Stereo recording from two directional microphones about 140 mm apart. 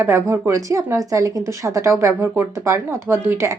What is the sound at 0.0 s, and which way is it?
A woman's voice, 15° right (ahead or behind).